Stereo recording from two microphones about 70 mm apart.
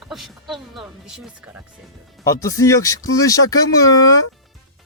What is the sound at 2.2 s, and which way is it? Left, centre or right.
Speech, left.